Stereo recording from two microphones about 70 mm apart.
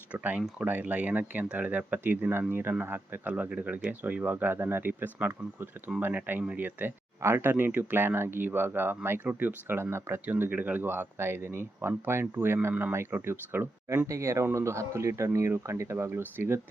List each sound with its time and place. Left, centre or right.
0.6 s speech: right
7.2 s speech: right
14.1 s speech: right